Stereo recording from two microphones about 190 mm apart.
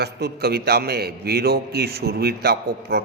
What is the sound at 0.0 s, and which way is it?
A man's voice, 55° right (ahead or behind).